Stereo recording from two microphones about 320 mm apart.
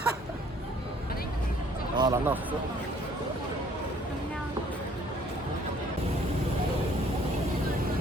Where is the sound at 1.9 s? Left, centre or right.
Centre.